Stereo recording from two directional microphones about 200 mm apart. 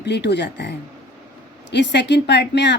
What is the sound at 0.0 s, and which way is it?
Speech, 60° left (ahead or behind).